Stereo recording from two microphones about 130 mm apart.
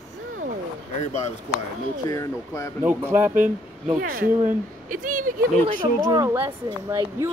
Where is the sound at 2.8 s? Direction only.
15° right (ahead or behind).